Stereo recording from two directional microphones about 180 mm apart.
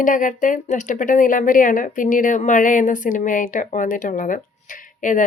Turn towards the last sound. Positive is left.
turn(degrees=45)  # may be behind; listen again after turning